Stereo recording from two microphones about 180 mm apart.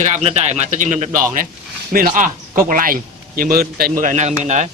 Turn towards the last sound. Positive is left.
turn(degrees=-40)  # may be behind; listen again after turning